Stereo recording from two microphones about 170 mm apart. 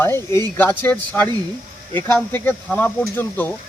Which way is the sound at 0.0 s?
15° left (ahead or behind).